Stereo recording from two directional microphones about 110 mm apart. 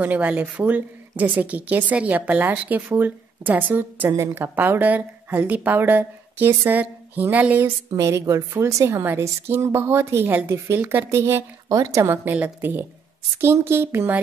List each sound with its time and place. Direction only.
0.0 s a woman's voice: 15° right (ahead or behind)
7.9 s a woman's voice: 25° right (ahead or behind)